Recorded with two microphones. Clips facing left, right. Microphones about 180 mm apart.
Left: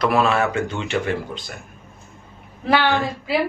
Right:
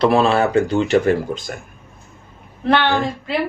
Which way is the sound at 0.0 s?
30° right (ahead or behind).